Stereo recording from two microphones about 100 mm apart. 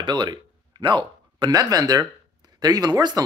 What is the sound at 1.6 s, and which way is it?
Speech, 40° right (ahead or behind).